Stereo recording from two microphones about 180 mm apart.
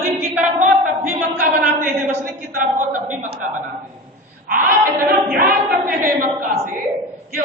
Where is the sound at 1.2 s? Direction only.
50° right (ahead or behind).